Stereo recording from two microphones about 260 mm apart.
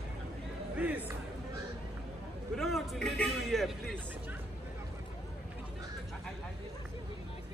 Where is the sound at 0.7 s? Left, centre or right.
Centre.